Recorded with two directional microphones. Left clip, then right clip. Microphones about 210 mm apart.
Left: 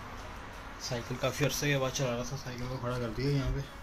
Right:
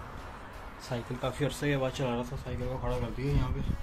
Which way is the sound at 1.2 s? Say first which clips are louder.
Left 2 dB; centre (ahead or behind).